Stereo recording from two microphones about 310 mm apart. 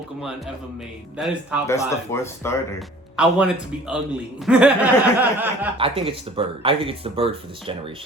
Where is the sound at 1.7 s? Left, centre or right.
Centre.